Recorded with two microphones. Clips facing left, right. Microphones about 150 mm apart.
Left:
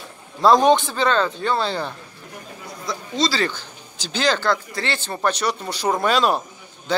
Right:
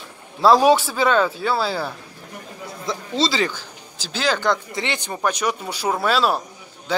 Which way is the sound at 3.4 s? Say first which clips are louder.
Left 1 dB; 5° right (ahead or behind).